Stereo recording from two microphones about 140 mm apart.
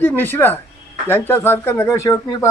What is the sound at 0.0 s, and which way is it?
A man's voice, 15° left (ahead or behind).